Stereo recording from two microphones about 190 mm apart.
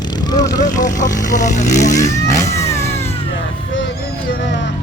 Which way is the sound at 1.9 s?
15° left (ahead or behind).